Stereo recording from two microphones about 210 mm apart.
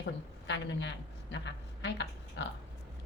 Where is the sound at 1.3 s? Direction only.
55° left (ahead or behind).